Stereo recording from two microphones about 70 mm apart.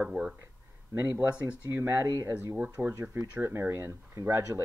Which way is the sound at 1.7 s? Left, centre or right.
Right.